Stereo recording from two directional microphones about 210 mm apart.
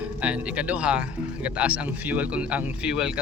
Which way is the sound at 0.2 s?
5° right (ahead or behind).